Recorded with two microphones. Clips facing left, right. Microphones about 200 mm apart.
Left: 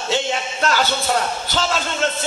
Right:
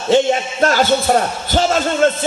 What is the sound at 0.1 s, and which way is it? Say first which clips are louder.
A man's voice: right 9 dB; 45° right (ahead or behind).